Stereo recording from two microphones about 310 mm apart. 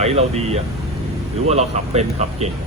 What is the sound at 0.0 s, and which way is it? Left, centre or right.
Speech, right.